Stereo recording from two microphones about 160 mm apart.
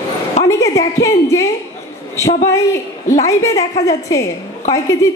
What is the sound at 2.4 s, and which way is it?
A woman's voice, 15° left (ahead or behind).